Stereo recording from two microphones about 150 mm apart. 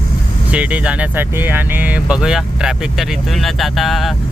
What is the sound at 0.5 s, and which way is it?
Speech, 10° right (ahead or behind).